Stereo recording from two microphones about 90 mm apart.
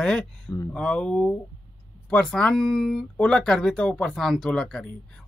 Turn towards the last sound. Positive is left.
turn(degrees=10)  # may be behind; listen again after turning